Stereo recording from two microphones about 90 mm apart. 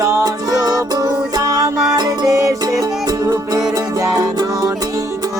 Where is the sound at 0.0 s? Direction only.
35° right (ahead or behind).